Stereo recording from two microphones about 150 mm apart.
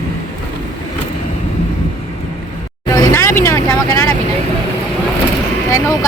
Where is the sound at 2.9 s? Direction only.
25° left (ahead or behind).